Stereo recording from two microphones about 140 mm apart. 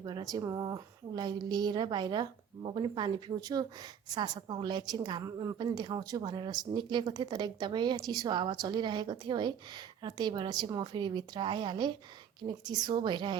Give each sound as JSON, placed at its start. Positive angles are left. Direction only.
{"t": 0.0, "sound": "speech", "side_deg": -30}